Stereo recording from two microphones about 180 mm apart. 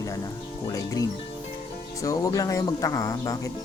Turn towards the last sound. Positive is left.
turn(degrees=20)  # may be behind; listen again after turning